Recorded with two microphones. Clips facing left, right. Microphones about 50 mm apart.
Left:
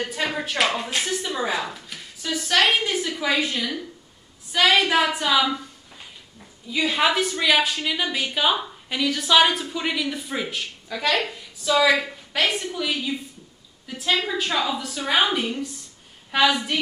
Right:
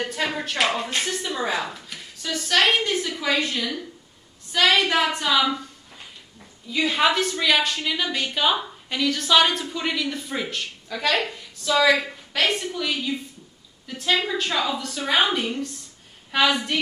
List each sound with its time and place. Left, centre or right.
0.0 s a woman's voice: centre
6.7 s a woman's voice: centre